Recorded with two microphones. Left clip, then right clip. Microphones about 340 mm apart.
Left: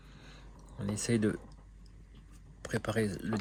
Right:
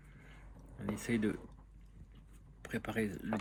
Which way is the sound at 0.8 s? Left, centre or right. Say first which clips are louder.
Left 4 dB; left.